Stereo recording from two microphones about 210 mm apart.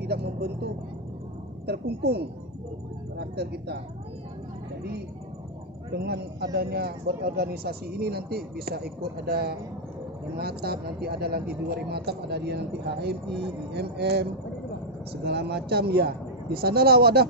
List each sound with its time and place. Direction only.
0.0 s speech: 50° right (ahead or behind)
1.7 s speech: 50° right (ahead or behind)
5.9 s speech: 50° right (ahead or behind)
15.2 s speech: 50° right (ahead or behind)